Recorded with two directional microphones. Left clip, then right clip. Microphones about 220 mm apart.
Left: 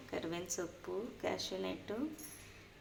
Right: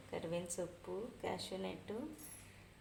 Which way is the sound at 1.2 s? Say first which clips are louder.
Left 4 dB; 5° left (ahead or behind).